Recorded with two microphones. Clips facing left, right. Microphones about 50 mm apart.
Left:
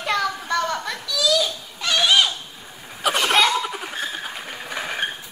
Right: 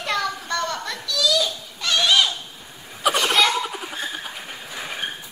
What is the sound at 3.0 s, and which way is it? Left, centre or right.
Laughter, centre.